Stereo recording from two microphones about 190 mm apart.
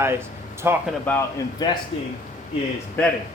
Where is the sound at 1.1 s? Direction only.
10° left (ahead or behind).